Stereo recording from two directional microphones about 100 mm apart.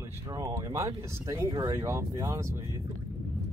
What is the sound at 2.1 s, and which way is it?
Speech, 35° right (ahead or behind).